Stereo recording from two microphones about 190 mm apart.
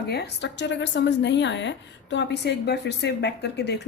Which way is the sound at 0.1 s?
60° left (ahead or behind).